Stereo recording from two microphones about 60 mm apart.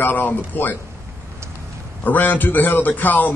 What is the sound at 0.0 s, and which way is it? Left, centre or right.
Speech, left.